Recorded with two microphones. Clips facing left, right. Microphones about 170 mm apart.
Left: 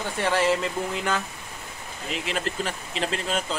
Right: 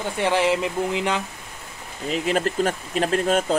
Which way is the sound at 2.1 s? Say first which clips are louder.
Right 7 dB; 45° right (ahead or behind).